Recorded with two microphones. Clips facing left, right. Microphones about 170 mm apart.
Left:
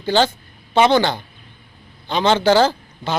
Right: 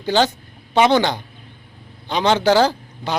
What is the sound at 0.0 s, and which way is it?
A woman's voice, 10° right (ahead or behind).